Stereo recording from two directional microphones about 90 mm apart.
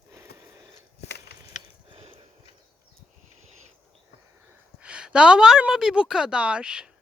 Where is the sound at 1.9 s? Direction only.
85° right.